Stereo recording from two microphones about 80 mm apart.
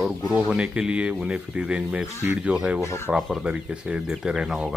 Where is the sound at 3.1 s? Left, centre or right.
Centre.